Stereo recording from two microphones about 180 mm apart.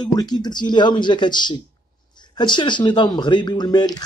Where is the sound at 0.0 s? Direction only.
20° left (ahead or behind).